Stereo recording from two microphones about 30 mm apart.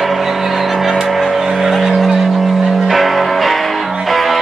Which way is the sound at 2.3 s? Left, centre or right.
Centre.